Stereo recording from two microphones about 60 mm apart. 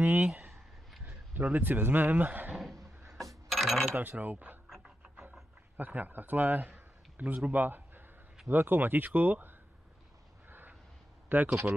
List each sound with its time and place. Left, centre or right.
0.0 s speech: right
1.4 s speech: right
2.5 s a sound: centre
3.1 s coin: centre
3.9 s a man's voice: right
4.6 s a sound: centre
5.8 s a man's voice: right
10.5 s a sound: right
11.4 s a man's voice: right